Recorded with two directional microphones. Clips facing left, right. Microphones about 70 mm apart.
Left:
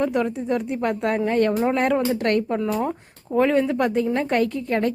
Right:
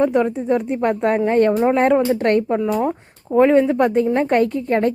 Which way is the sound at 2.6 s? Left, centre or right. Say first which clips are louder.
Right 4 dB; centre.